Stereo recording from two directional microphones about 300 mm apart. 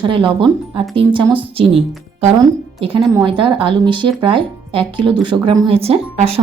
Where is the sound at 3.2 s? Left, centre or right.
Centre.